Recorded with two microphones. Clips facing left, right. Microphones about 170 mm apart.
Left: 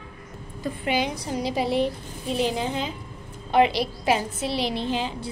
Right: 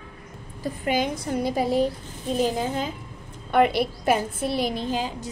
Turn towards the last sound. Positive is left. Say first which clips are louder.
# even
turn(degrees=-45)  # may be behind; listen again after turning